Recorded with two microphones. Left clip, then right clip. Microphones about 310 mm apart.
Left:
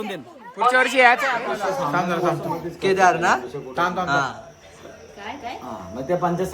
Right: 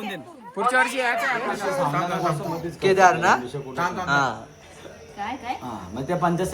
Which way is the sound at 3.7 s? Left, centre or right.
Left.